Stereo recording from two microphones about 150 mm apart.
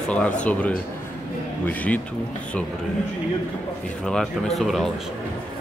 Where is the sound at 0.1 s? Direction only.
10° left (ahead or behind).